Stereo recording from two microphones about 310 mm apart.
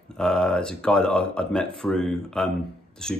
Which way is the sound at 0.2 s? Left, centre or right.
Centre.